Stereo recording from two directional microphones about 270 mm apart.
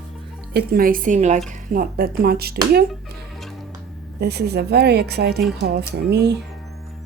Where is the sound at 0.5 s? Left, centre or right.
Right.